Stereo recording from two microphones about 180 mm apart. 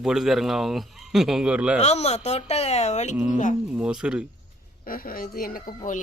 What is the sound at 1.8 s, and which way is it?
Speech, 35° left (ahead or behind).